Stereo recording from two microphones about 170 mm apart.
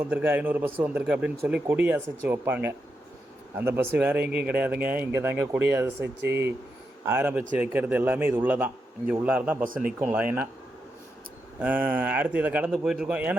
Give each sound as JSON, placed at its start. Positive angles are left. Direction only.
{"t": 0.0, "sound": "a man's voice", "side_deg": -10}
{"t": 9.6, "sound": "speech", "side_deg": -55}
{"t": 10.0, "sound": "a man's voice", "side_deg": -10}
{"t": 11.6, "sound": "a man's voice", "side_deg": -10}